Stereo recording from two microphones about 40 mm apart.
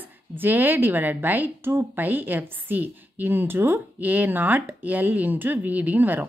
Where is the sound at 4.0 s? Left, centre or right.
Right.